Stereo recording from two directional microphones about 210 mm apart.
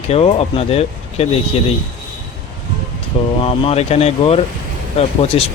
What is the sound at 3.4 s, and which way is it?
Speech, 25° left (ahead or behind).